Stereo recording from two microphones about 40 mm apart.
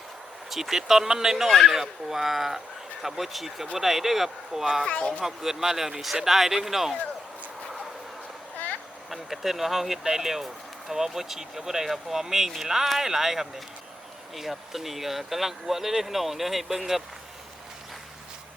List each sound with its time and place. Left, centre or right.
0.5 s speech: centre
4.9 s speech: left
5.2 s speech: centre
9.0 s speech: centre